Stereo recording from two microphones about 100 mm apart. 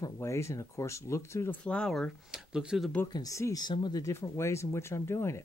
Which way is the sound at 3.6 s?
45° left (ahead or behind).